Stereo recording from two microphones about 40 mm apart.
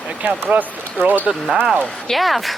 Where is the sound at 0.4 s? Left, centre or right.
Right.